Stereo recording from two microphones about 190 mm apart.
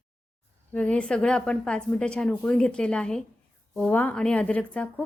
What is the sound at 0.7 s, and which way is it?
A woman's voice, 5° left (ahead or behind).